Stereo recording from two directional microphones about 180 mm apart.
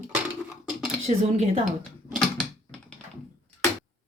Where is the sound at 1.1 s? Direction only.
35° right (ahead or behind).